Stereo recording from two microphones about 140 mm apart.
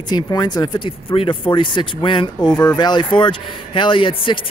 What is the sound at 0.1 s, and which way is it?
Speech, 30° left (ahead or behind).